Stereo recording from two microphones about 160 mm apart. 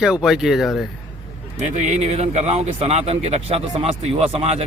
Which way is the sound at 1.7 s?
45° right (ahead or behind).